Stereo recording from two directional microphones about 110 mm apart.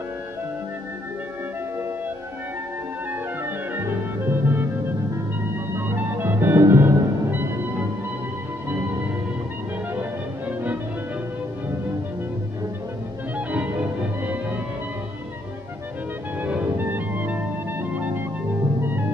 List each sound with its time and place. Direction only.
3.1 s music: 20° right (ahead or behind)
5.8 s music: 20° right (ahead or behind)
13.5 s music: 15° right (ahead or behind)
16.3 s music: 15° right (ahead or behind)